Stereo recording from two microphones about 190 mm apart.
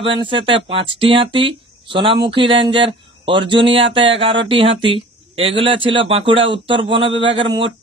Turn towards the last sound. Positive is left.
turn(degrees=-25)  # may be behind; listen again after turning